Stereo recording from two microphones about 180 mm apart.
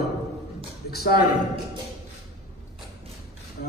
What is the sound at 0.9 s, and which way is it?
Speech, 60° left (ahead or behind).